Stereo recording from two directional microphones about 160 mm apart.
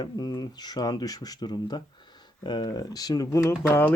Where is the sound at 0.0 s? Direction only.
25° left (ahead or behind).